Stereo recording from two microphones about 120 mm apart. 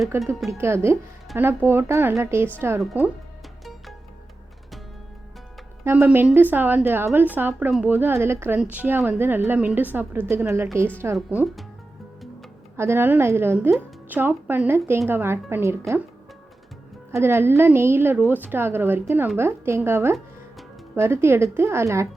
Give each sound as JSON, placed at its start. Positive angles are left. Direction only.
{"t": 0.1, "sound": "a woman's voice", "side_deg": -20}
{"t": 5.8, "sound": "a woman's voice", "side_deg": -15}
{"t": 12.7, "sound": "a woman's voice", "side_deg": -20}
{"t": 17.1, "sound": "a woman's voice", "side_deg": -20}